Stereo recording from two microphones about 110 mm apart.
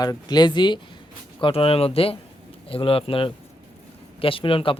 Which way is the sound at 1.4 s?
60° left (ahead or behind).